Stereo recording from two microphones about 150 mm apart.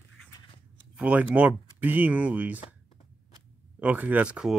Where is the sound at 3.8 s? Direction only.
10° right (ahead or behind).